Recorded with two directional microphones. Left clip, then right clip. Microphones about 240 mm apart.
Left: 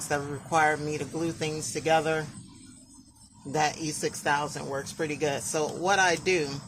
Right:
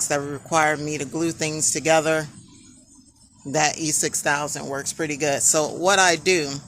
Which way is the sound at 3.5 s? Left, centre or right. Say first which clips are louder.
Right 6 dB; right.